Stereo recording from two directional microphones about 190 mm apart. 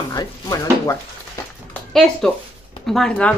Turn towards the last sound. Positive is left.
turn(degrees=5)  # may be behind; listen again after turning